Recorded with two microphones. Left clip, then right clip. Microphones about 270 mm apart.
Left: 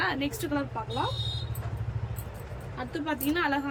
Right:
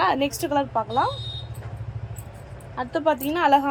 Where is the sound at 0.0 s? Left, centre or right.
Centre.